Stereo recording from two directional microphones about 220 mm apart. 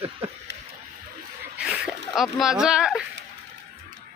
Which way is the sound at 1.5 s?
5° right (ahead or behind).